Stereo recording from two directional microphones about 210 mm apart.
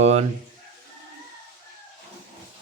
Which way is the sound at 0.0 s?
30° right (ahead or behind).